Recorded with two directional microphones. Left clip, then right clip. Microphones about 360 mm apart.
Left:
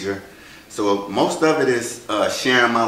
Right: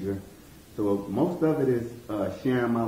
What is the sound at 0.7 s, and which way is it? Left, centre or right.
Speech, left.